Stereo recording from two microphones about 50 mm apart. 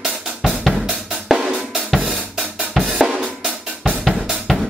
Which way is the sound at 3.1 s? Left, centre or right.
Centre.